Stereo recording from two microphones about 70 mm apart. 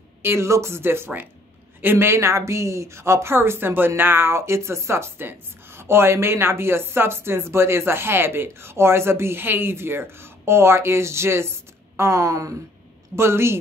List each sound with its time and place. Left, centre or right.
0.2 s speech: right
13.1 s speech: right